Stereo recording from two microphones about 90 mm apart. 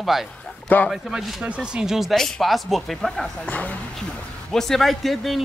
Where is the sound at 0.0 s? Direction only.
Centre (ahead or behind).